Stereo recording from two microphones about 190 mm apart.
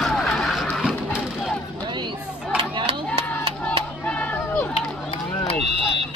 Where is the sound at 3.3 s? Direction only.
5° left (ahead or behind).